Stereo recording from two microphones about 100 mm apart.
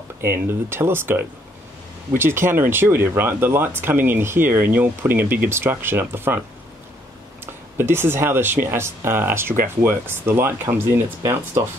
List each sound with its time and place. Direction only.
0.2 s speech: 25° right (ahead or behind)
7.7 s speech: 25° right (ahead or behind)